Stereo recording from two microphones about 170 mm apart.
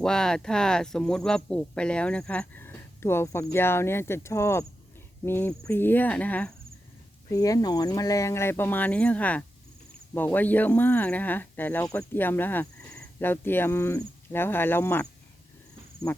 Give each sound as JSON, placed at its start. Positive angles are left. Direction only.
{"t": 0.0, "sound": "speech", "side_deg": 5}
{"t": 7.3, "sound": "speech", "side_deg": 20}